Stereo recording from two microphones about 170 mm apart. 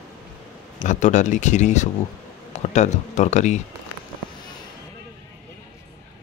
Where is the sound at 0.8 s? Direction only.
45° left (ahead or behind).